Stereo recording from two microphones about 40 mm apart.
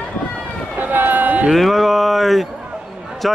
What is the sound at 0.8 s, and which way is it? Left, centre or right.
Run, right.